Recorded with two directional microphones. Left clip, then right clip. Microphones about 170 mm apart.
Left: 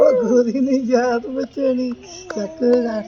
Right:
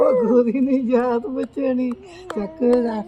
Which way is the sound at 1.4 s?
15° right (ahead or behind).